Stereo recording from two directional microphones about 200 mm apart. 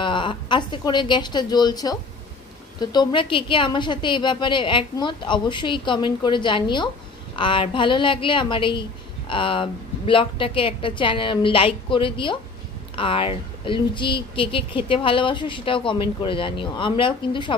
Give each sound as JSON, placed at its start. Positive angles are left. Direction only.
{"t": 0.0, "sound": "speech", "side_deg": 25}